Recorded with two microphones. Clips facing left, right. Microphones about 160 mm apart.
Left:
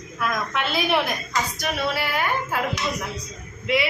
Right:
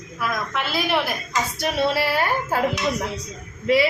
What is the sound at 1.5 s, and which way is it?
A woman's voice, 25° right (ahead or behind).